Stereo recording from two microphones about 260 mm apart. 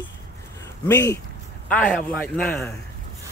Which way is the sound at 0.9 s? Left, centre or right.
Centre.